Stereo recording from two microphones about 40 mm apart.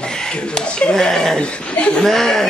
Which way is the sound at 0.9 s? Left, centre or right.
Centre.